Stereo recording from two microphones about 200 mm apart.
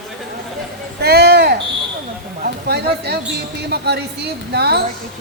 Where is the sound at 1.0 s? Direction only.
55° right (ahead or behind).